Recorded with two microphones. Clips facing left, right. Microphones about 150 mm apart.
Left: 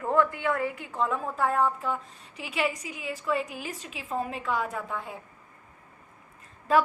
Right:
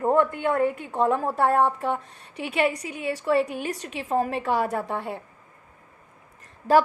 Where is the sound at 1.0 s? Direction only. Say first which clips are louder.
Right 7 dB; 35° right (ahead or behind).